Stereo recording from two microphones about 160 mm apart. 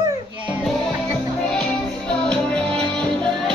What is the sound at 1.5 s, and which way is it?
Music, 5° left (ahead or behind).